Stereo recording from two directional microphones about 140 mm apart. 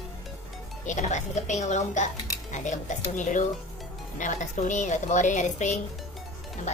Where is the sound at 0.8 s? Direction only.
60° left (ahead or behind).